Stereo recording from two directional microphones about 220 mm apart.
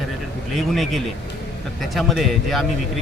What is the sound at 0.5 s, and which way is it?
Speech, centre (ahead or behind).